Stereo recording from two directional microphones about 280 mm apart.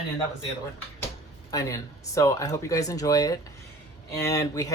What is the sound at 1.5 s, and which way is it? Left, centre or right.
Speech, centre.